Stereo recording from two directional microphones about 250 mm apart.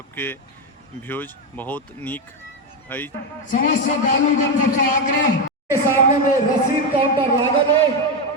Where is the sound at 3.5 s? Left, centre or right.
Left.